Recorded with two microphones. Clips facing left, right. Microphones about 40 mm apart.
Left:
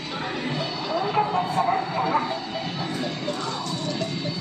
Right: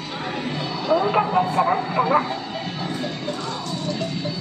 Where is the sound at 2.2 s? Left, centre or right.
Centre.